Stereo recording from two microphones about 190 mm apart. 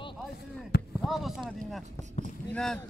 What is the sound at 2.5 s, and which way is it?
Boat, 5° left (ahead or behind).